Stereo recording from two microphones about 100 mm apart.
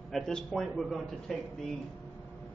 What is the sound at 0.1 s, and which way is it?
A man's voice, 5° left (ahead or behind).